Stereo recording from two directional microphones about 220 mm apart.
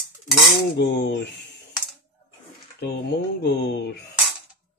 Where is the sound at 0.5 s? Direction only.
50° left (ahead or behind).